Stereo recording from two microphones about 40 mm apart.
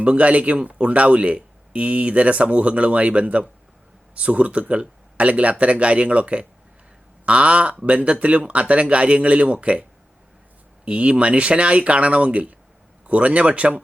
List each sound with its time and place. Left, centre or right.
0.0 s speech: right
10.8 s speech: right